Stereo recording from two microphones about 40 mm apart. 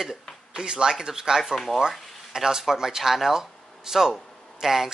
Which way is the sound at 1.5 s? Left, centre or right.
Centre.